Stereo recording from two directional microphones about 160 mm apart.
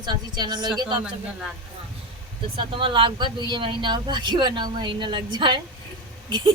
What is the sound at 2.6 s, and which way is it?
Speech, 30° right (ahead or behind).